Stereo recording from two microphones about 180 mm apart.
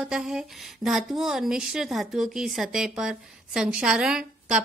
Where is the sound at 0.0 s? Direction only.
5° right (ahead or behind).